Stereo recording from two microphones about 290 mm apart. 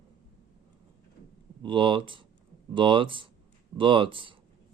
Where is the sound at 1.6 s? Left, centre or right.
Centre.